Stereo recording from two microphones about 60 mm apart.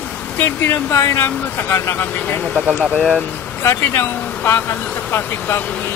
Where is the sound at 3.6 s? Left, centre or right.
Left.